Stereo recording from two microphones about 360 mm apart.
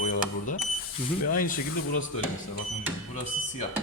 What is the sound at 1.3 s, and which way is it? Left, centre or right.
Speech, left.